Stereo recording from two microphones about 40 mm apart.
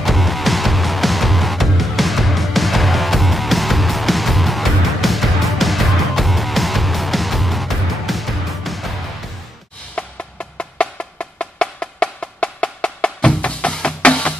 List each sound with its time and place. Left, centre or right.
0.0 s music: centre
10.0 s music: left
10.6 s wood block: left
13.8 s music: left